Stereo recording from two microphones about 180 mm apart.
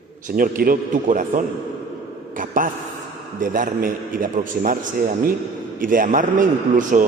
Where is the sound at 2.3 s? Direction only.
50° right (ahead or behind).